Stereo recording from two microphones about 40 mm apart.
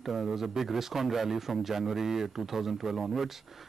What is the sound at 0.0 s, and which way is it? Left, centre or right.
Speech, centre.